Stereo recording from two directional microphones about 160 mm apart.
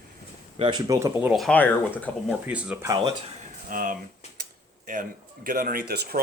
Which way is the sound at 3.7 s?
60° right (ahead or behind).